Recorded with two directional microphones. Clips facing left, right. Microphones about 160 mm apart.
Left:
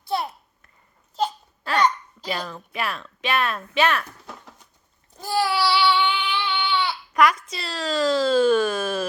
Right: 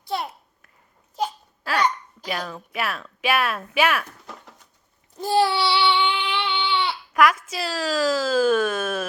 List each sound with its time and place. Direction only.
0.0 s babbling: 20° right (ahead or behind)
1.6 s hiccup: 5° right (ahead or behind)
2.5 s speech: 5° right (ahead or behind)
5.2 s child singing: 25° right (ahead or behind)
7.1 s speech: centre (ahead or behind)